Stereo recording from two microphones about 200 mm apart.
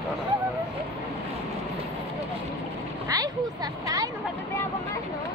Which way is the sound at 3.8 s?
15° right (ahead or behind).